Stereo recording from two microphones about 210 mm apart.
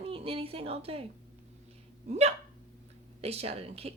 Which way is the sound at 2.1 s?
30° right (ahead or behind).